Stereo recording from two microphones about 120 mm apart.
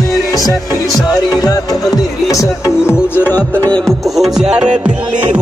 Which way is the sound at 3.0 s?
15° left (ahead or behind).